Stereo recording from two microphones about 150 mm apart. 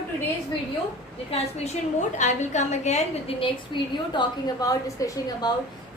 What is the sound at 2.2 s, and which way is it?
A woman's voice, 55° left (ahead or behind).